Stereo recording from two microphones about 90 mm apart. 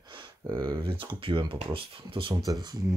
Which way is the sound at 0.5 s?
45° right (ahead or behind).